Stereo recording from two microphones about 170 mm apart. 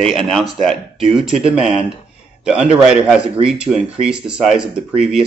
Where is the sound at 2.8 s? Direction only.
5° right (ahead or behind).